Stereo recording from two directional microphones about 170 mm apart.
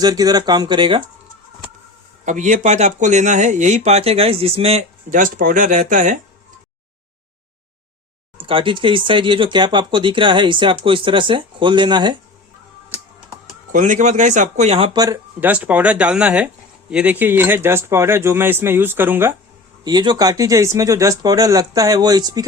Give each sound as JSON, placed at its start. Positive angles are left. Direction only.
{"t": 0.0, "sound": "speech", "side_deg": -20}
{"t": 2.2, "sound": "speech", "side_deg": -45}
{"t": 8.4, "sound": "speech", "side_deg": -30}
{"t": 13.7, "sound": "speech", "side_deg": -45}
{"t": 14.9, "sound": "speech", "side_deg": -20}
{"t": 15.4, "sound": "speech", "side_deg": -10}
{"t": 19.8, "sound": "speech", "side_deg": -25}